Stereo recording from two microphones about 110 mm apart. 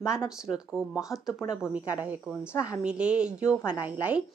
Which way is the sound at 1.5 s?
10° right (ahead or behind).